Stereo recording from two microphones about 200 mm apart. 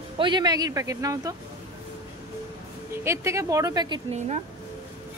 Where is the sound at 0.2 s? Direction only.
20° right (ahead or behind).